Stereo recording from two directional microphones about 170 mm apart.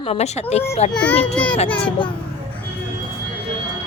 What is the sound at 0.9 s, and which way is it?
A child's voice, 5° left (ahead or behind).